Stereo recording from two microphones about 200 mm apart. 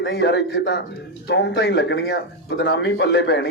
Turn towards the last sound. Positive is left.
turn(degrees=60)  # may be behind; listen again after turning